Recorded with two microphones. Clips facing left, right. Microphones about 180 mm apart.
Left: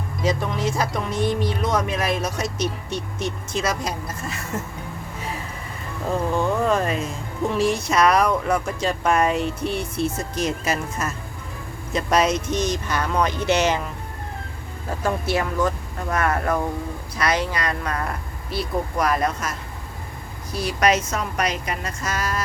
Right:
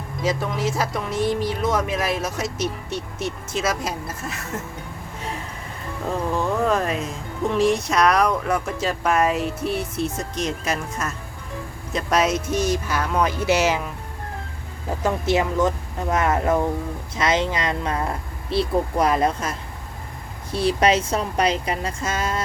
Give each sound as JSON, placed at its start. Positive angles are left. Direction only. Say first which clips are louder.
{"t": 0.2, "sound": "speech", "louder": "even", "side_deg": -5}
{"t": 6.3, "sound": "speech", "louder": "even", "side_deg": 0}
{"t": 14.8, "sound": "a woman's voice", "louder": "right 2 dB", "side_deg": -20}